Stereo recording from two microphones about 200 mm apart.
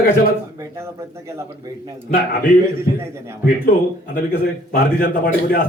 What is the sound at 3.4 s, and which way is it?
A man's voice, 45° left (ahead or behind).